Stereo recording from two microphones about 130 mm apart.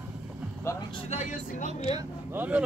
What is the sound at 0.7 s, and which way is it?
Vehicle, 20° left (ahead or behind).